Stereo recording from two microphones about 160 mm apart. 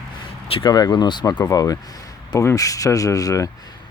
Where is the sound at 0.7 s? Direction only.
25° left (ahead or behind).